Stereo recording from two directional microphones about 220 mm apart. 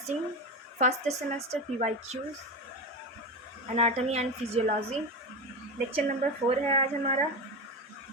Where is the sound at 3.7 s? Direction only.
30° right (ahead or behind).